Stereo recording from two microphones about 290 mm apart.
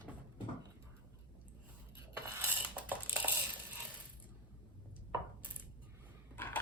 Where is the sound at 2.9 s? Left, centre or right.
Centre.